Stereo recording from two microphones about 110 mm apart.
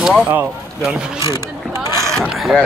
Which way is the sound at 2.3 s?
Centre (ahead or behind).